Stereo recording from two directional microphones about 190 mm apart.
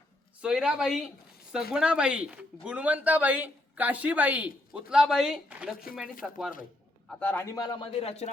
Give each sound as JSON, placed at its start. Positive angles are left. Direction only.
{"t": 0.4, "sound": "speech", "side_deg": -5}
{"t": 5.7, "sound": "speech", "side_deg": 50}
{"t": 6.2, "sound": "a man's voice", "side_deg": -5}